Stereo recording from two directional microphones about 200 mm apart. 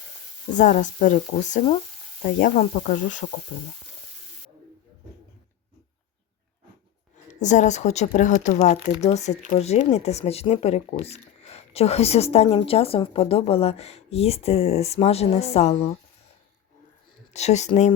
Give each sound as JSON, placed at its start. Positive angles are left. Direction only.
{"t": 0.5, "sound": "speech", "side_deg": 40}
{"t": 3.5, "sound": "speech", "side_deg": 50}
{"t": 7.3, "sound": "speech", "side_deg": 35}
{"t": 17.3, "sound": "speech", "side_deg": 35}